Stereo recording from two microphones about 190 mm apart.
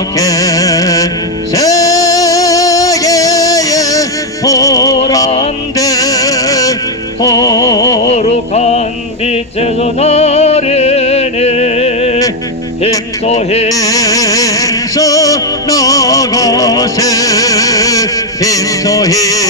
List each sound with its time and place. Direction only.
0.2 s carnatic music: 20° left (ahead or behind)
1.5 s music: 20° left (ahead or behind)
8.1 s music: 35° left (ahead or behind)
13.3 s music: 35° left (ahead or behind)
13.7 s music: 20° left (ahead or behind)